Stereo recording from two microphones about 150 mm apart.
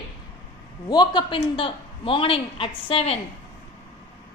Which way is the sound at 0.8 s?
30° left (ahead or behind).